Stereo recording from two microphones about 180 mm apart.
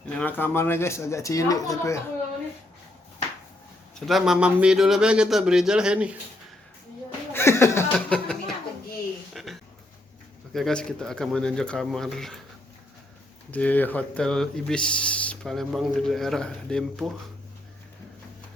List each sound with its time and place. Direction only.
0.2 s speech: 10° left (ahead or behind)
4.0 s speech: centre (ahead or behind)
7.3 s chuckle: 15° left (ahead or behind)
7.9 s music: 5° left (ahead or behind)
9.3 s a sound: centre (ahead or behind)
10.5 s speech: 5° left (ahead or behind)
13.5 s speech: 10° left (ahead or behind)